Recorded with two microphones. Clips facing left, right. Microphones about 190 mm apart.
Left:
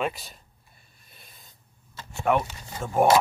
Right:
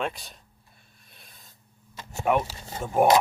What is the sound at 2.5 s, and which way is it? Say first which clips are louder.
Speech: right 1 dB; 30° right (ahead or behind).